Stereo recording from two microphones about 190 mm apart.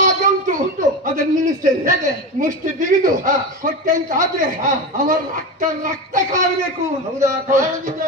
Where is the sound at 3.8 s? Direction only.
45° right (ahead or behind).